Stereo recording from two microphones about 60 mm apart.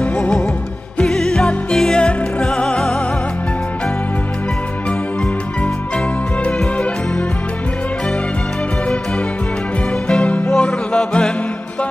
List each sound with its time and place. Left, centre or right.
0.0 s music: left
6.4 s music: left
10.0 s music: centre